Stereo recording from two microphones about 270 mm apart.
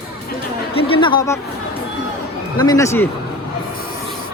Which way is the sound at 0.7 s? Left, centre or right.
Centre.